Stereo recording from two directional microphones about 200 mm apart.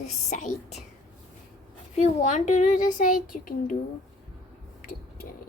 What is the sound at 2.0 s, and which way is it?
A woman's voice, 40° left (ahead or behind).